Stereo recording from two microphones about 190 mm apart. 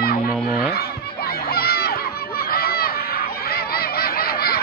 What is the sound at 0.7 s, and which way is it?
Crowd, 55° left (ahead or behind).